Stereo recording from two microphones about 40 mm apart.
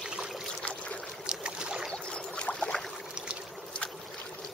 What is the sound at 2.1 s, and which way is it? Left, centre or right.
Boat, left.